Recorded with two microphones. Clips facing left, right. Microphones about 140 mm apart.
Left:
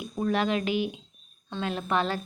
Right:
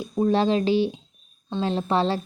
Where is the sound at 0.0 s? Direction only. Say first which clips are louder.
Right 6 dB; 30° right (ahead or behind).